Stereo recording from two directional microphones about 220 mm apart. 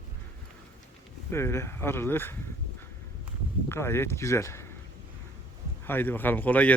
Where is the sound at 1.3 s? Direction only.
10° left (ahead or behind).